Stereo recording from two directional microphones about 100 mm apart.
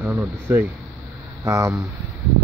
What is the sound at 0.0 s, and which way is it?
Speech, 15° right (ahead or behind).